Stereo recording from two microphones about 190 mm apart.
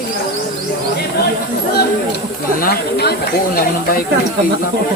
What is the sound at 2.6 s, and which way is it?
Speech, 55° left (ahead or behind).